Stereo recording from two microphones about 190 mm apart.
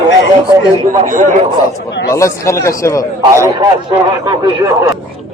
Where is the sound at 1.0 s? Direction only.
40° right (ahead or behind).